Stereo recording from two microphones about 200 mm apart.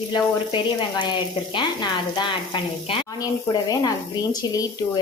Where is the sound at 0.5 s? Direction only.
25° left (ahead or behind).